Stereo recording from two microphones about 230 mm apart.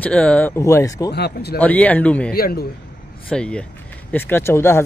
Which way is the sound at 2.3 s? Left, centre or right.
Left.